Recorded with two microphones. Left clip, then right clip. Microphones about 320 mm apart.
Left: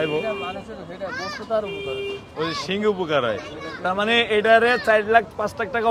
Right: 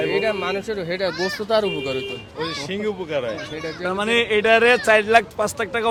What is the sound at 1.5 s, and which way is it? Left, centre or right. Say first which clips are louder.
Speech: right 4 dB; right.